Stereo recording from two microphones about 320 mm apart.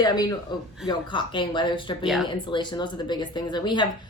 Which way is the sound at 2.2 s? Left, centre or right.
Centre.